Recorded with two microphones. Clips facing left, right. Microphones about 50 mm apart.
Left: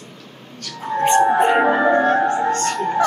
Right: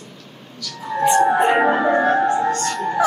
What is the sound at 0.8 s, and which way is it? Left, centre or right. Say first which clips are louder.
Music: even; left.